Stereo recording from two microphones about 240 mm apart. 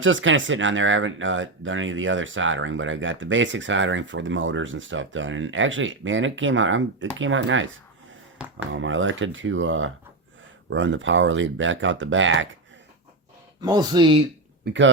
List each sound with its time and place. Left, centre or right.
0.0 s speech: right
8.7 s speech: right
13.6 s speech: centre
14.6 s speech: right